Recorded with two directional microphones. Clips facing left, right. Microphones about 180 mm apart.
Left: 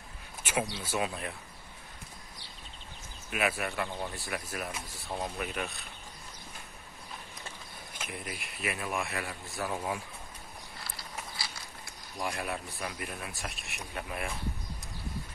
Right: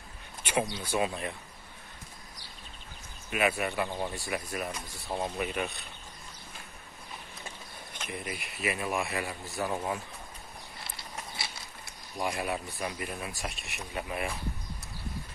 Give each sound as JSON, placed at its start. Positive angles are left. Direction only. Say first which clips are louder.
{"t": 0.4, "sound": "speech", "louder": "right 2 dB", "side_deg": 5}
{"t": 3.3, "sound": "speech", "louder": "right 3 dB", "side_deg": 0}
{"t": 7.9, "sound": "speech", "louder": "right 3 dB", "side_deg": 5}
{"t": 11.0, "sound": "a sound", "louder": "right 1 dB", "side_deg": -25}
{"t": 12.2, "sound": "speech", "louder": "right 3 dB", "side_deg": 0}